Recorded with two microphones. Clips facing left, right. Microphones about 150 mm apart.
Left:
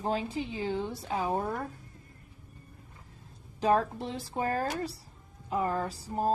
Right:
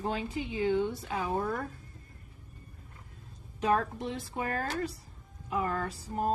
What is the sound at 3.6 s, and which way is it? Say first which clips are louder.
A woman's voice: left 2 dB; 30° left (ahead or behind).